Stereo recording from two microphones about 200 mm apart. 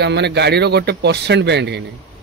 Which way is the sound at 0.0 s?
60° right (ahead or behind).